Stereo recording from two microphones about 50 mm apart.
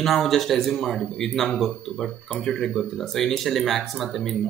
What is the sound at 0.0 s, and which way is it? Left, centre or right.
Speech, centre.